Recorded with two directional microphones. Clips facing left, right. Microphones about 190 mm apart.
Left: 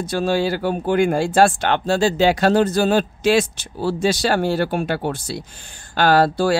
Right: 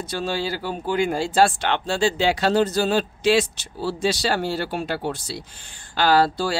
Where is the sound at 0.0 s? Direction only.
50° left (ahead or behind).